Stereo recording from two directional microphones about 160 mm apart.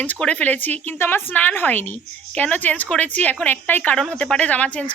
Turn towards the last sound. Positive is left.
turn(degrees=10)  # may be behind; listen again after turning